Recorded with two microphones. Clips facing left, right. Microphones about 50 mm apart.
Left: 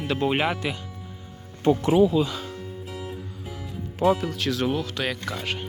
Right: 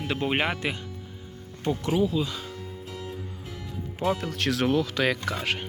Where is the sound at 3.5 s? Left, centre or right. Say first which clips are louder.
Left 2 dB; centre.